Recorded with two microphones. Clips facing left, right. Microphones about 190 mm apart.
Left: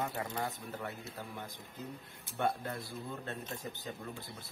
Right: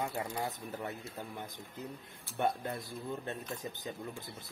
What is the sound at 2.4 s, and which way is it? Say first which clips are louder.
Speech: right 1 dB; 20° right (ahead or behind).